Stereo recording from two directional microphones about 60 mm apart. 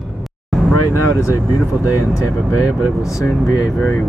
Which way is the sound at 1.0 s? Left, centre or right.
Left.